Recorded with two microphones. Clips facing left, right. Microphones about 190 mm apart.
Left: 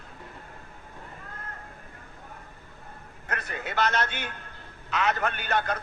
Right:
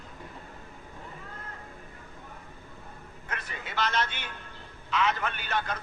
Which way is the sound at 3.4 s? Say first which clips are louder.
Left 4 dB; 55° left (ahead or behind).